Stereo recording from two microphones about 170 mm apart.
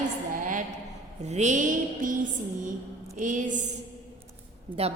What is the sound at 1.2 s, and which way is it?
Mantra, 40° right (ahead or behind).